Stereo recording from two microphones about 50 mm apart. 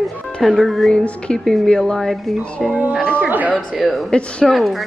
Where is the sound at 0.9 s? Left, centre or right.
Centre.